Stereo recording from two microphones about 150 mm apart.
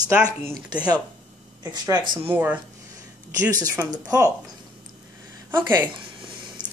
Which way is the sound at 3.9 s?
25° right (ahead or behind).